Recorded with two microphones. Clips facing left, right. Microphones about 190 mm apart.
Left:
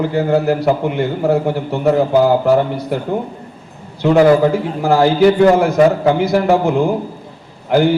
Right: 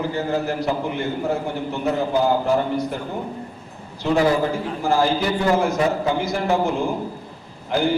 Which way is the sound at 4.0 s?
60° left (ahead or behind).